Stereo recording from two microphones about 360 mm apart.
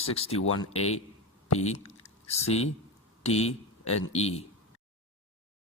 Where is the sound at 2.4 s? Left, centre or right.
Centre.